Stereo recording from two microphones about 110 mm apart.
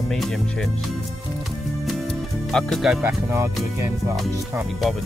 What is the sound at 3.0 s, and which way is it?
Speech, 25° right (ahead or behind).